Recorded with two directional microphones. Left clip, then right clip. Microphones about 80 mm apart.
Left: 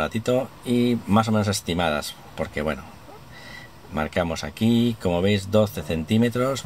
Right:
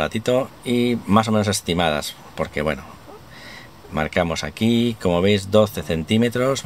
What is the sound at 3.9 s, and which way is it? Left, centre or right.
Speech, right.